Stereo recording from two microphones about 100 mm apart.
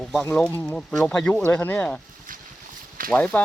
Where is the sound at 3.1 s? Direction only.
15° left (ahead or behind).